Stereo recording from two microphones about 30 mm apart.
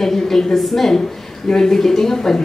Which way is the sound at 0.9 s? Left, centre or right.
Centre.